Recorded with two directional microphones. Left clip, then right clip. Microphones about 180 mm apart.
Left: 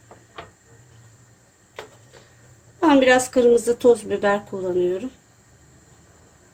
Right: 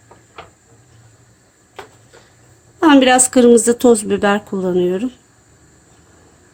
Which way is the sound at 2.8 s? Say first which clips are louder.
Right 5 dB; 40° right (ahead or behind).